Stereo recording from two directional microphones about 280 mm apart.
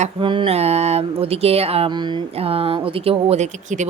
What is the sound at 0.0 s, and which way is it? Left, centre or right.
Speech, centre.